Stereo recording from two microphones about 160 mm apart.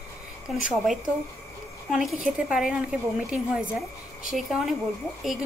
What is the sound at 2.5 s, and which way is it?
A woman's voice, 5° right (ahead or behind).